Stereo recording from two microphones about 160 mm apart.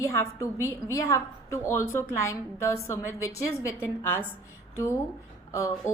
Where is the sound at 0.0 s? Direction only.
15° left (ahead or behind).